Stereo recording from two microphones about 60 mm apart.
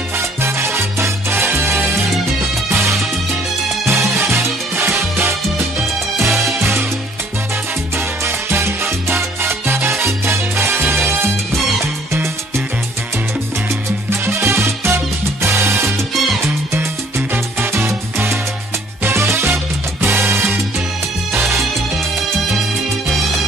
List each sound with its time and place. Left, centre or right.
0.4 s salsa music: right
2.7 s music: right
6.1 s music: right
8.2 s salsa music: right
11.8 s music: right
14.1 s music: right
17.7 s music: right